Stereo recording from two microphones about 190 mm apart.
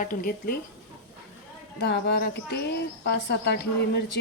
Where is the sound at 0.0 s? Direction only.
45° left (ahead or behind).